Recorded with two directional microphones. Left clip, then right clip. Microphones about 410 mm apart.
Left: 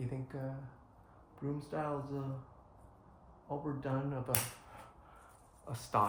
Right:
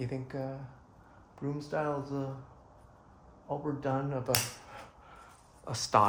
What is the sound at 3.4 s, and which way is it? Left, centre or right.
Speech, right.